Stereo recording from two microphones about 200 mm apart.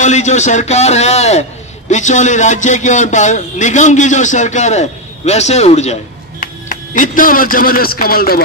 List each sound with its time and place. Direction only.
0.0 s a man's voice: 35° left (ahead or behind)